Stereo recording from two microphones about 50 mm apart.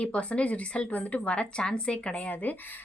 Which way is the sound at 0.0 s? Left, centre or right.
Left.